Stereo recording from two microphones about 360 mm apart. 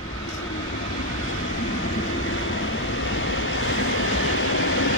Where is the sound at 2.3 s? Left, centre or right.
Left.